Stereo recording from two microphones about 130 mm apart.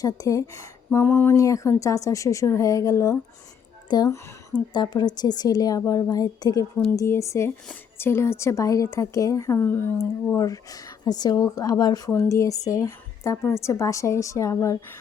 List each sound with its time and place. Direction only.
0.0 s speech: 25° left (ahead or behind)